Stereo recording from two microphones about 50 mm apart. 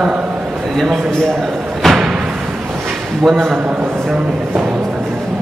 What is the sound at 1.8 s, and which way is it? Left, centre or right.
Thump, centre.